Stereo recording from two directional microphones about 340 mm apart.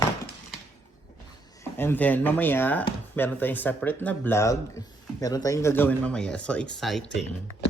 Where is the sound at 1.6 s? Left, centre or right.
Centre.